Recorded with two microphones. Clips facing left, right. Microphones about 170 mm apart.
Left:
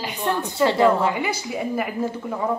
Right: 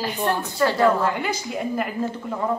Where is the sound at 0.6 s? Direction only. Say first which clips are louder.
Left 2 dB; 20° left (ahead or behind).